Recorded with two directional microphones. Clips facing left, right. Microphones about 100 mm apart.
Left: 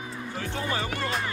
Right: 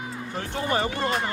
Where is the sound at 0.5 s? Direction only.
25° right (ahead or behind).